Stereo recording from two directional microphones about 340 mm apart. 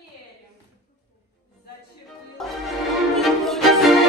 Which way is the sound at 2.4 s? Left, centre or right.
Centre.